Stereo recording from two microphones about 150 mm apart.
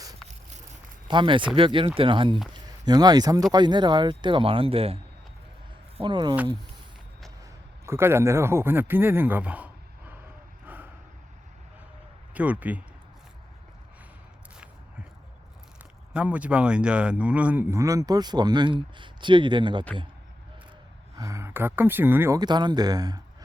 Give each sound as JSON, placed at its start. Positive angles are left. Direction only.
{"t": 1.0, "sound": "speech", "side_deg": -35}
{"t": 6.0, "sound": "speech", "side_deg": -30}
{"t": 7.9, "sound": "speech", "side_deg": -15}
{"t": 10.7, "sound": "a sound", "side_deg": -10}
{"t": 12.3, "sound": "speech", "side_deg": -10}
{"t": 16.1, "sound": "speech", "side_deg": -10}
{"t": 21.2, "sound": "speech", "side_deg": -20}
{"t": 22.4, "sound": "speech", "side_deg": -30}